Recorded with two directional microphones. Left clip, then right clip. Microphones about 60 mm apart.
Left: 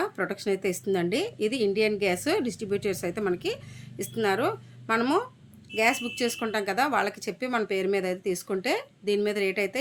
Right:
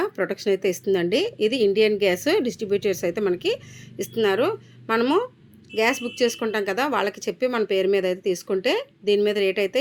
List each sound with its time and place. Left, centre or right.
0.0 s speech: right
5.7 s speech: right